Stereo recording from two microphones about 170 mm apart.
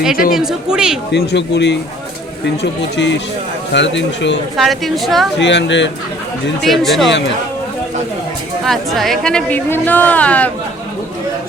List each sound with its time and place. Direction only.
0.3 s a woman's voice: 5° right (ahead or behind)
1.1 s speech: 90° left
4.5 s a woman's voice: centre (ahead or behind)
5.4 s speech: 90° left
6.6 s a woman's voice: centre (ahead or behind)
8.6 s speech: centre (ahead or behind)